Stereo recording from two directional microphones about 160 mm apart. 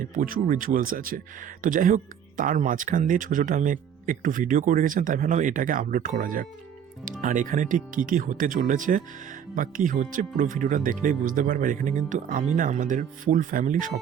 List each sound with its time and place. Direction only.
0.0 s speech: 60° right (ahead or behind)